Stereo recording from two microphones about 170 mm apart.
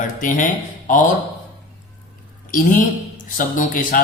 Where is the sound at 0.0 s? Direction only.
50° left (ahead or behind).